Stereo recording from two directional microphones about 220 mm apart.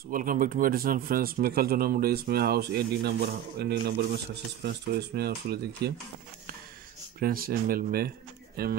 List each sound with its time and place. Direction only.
0.1 s speech: 40° right (ahead or behind)
7.2 s speech: 40° right (ahead or behind)